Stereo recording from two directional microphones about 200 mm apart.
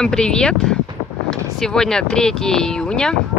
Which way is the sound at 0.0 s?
5° left (ahead or behind).